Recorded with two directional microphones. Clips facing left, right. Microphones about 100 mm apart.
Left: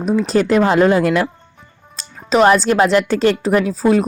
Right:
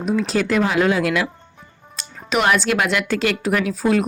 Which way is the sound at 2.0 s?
35° left (ahead or behind).